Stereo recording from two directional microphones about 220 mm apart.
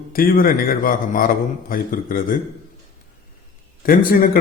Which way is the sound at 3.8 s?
40° left (ahead or behind).